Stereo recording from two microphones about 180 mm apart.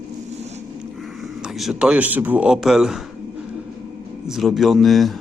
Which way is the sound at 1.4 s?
Centre (ahead or behind).